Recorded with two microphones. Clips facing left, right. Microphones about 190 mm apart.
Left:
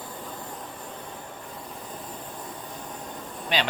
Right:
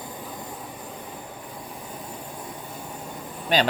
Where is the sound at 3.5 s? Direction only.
45° right (ahead or behind).